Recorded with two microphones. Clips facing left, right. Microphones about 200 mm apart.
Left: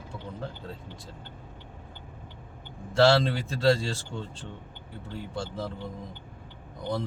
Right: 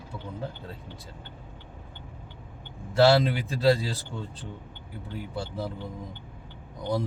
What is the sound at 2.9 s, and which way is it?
Speech, 5° right (ahead or behind).